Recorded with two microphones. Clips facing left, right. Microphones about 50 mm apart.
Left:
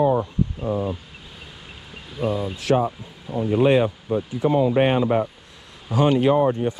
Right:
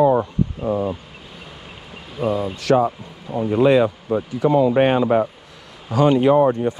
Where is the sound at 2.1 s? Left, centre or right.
Centre.